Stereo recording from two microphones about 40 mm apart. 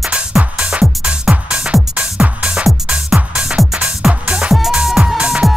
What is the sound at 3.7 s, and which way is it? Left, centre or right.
Music, right.